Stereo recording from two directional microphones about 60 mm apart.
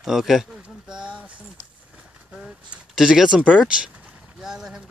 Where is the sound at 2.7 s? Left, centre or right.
Right.